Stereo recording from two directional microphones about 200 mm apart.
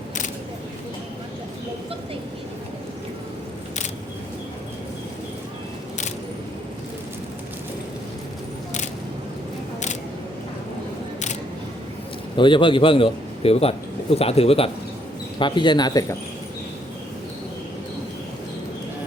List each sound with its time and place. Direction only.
12.4 s a man's voice: 25° left (ahead or behind)